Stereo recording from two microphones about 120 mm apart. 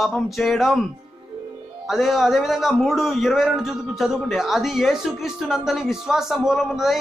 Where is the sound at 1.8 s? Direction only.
Centre (ahead or behind).